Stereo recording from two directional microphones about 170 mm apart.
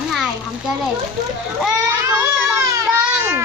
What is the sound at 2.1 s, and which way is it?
Baby cry, 15° right (ahead or behind).